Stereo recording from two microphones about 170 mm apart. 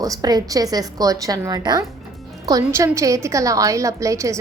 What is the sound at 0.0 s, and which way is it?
A woman's voice, 20° right (ahead or behind).